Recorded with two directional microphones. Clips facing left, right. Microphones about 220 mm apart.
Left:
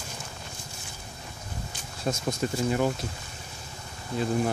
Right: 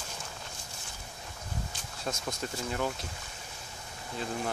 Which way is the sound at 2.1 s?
15° left (ahead or behind).